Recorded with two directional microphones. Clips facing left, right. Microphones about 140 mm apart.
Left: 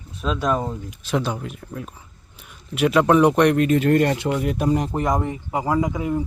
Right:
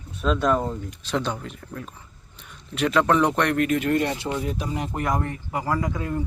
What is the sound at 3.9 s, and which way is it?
Speech, 55° left (ahead or behind).